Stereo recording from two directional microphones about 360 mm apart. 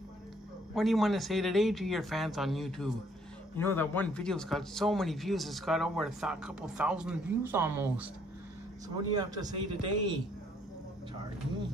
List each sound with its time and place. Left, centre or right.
0.7 s speech: centre